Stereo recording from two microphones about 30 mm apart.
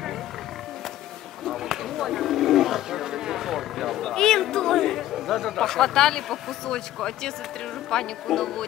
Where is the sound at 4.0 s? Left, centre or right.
Centre.